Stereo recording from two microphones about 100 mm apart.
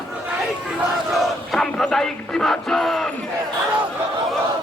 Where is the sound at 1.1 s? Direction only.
Centre (ahead or behind).